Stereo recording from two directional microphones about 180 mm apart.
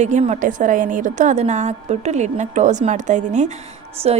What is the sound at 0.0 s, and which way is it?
A woman's voice, 40° right (ahead or behind).